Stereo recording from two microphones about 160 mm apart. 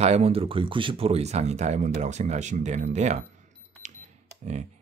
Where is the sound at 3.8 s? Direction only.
50° right (ahead or behind).